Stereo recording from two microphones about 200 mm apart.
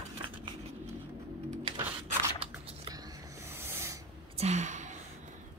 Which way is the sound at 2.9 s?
15° right (ahead or behind).